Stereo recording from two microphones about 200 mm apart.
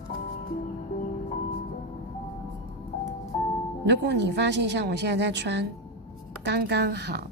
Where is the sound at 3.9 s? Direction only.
60° right (ahead or behind).